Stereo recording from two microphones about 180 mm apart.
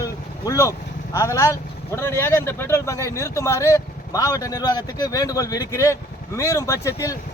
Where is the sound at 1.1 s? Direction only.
15° left (ahead or behind).